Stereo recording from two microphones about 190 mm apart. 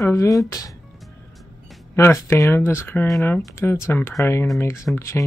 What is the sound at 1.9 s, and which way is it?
Speech, 15° left (ahead or behind).